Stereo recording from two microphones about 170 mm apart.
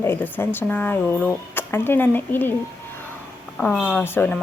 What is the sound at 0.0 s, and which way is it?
Speech, 10° left (ahead or behind).